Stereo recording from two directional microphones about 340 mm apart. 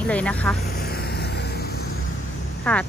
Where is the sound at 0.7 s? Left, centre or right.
Left.